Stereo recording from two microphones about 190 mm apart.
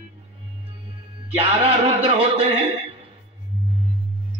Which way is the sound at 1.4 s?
30° right (ahead or behind).